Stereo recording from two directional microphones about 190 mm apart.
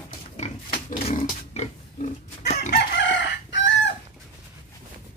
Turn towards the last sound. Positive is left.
turn(degrees=70)  # may be behind; listen again after turning